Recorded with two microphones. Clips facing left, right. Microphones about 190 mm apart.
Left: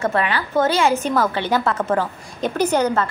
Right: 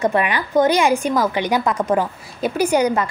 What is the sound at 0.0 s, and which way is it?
A woman's voice, 15° right (ahead or behind).